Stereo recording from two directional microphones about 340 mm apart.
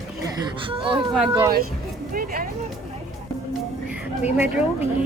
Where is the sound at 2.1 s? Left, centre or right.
Right.